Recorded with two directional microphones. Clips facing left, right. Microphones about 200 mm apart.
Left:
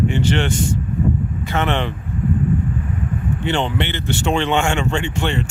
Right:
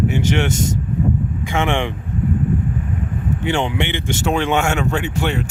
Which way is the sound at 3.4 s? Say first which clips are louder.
Right 1 dB; 10° right (ahead or behind).